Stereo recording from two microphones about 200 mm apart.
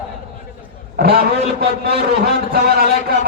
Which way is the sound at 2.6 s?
50° right (ahead or behind).